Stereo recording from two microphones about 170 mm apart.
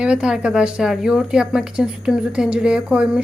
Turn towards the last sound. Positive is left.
turn(degrees=-5)  # may be behind; listen again after turning